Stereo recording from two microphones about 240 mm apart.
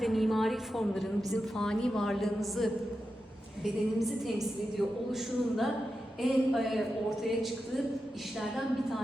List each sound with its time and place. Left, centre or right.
0.0 s a woman's voice: centre